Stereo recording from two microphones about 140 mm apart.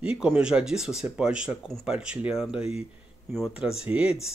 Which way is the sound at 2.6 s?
45° left (ahead or behind).